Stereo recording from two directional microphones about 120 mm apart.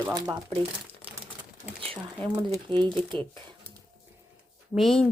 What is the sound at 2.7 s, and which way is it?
Speech, 10° left (ahead or behind).